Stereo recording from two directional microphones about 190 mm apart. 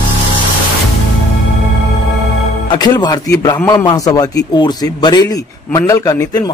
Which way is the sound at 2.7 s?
20° left (ahead or behind).